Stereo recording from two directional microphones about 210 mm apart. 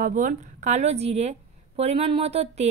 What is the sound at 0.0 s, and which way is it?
A woman's voice, 40° right (ahead or behind).